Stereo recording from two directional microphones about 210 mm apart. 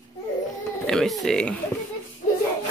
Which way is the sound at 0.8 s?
Centre (ahead or behind).